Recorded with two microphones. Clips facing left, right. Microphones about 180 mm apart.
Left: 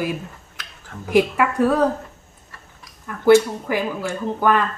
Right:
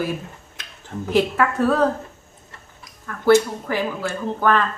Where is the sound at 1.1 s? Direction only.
10° left (ahead or behind).